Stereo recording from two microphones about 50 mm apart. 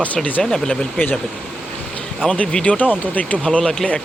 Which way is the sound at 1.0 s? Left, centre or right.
Left.